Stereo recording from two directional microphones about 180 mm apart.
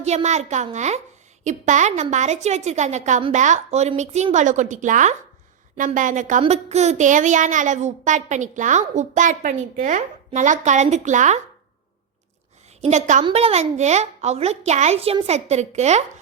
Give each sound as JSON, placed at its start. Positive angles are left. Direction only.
{"t": 0.0, "sound": "a woman's voice", "side_deg": -40}
{"t": 12.8, "sound": "a woman's voice", "side_deg": -40}